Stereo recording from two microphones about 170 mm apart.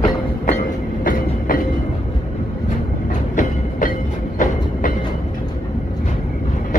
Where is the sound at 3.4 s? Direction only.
50° left (ahead or behind).